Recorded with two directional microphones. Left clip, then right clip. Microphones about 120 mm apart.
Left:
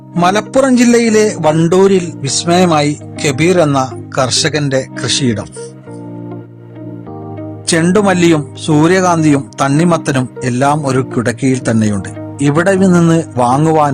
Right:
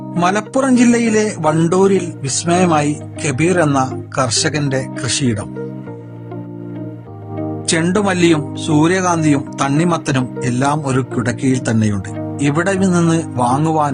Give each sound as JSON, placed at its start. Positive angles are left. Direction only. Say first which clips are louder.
{"t": 0.2, "sound": "speech", "louder": "left 5 dB", "side_deg": 25}
{"t": 7.7, "sound": "speech", "louder": "left 5 dB", "side_deg": 40}